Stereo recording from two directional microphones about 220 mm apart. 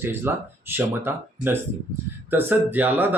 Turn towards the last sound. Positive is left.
turn(degrees=-10)  # may be behind; listen again after turning